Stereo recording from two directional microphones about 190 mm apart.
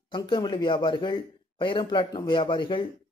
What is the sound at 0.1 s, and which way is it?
Speech, 25° left (ahead or behind).